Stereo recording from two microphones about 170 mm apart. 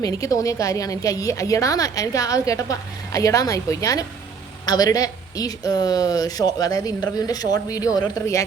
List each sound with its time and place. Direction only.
0.0 s a woman's voice: 20° left (ahead or behind)